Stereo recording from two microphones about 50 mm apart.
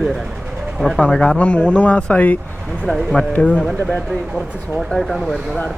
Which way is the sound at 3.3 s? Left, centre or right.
Left.